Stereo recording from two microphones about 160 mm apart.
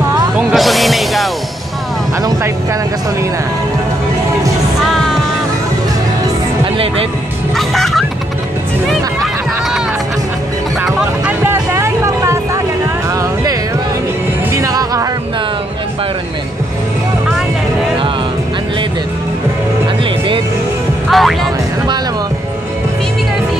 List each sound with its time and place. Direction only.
0.4 s music: centre (ahead or behind)
6.6 s music: 35° right (ahead or behind)
7.5 s music: centre (ahead or behind)
8.8 s run: centre (ahead or behind)
10.9 s music: 5° right (ahead or behind)
21.1 s music: centre (ahead or behind)